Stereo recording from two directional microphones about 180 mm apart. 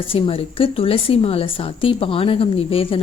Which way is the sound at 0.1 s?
30° left (ahead or behind).